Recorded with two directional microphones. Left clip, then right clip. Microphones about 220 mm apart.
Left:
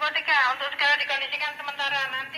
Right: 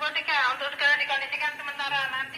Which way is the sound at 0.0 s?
35° left (ahead or behind).